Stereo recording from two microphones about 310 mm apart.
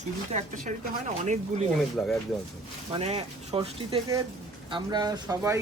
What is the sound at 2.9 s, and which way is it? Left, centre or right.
Speech, right.